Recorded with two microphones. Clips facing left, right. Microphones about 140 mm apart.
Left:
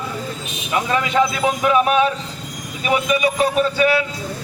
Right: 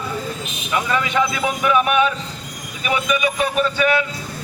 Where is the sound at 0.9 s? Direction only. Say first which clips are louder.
Left 3 dB; 35° left (ahead or behind).